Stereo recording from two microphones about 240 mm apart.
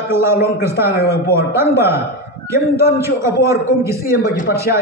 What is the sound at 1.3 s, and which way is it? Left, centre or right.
Speech, centre.